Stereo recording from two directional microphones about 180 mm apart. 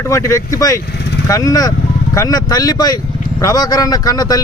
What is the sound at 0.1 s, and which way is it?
Speech, 20° left (ahead or behind).